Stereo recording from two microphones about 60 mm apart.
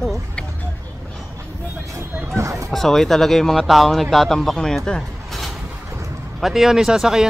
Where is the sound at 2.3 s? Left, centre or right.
Right.